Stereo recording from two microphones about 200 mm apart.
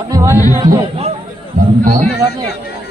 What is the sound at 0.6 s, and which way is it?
Speech, 25° right (ahead or behind).